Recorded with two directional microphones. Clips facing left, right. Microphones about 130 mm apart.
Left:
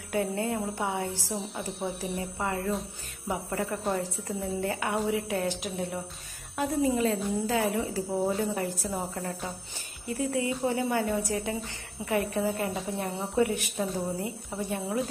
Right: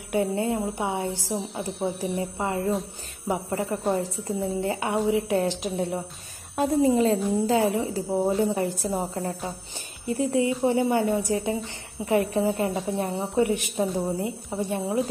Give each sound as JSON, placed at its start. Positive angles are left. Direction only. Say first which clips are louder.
{"t": 0.1, "sound": "a woman's voice", "louder": "right 4 dB", "side_deg": -20}
{"t": 1.9, "sound": "speech", "louder": "right 7 dB", "side_deg": 0}
{"t": 2.1, "sound": "a woman's voice", "louder": "right 4 dB", "side_deg": -25}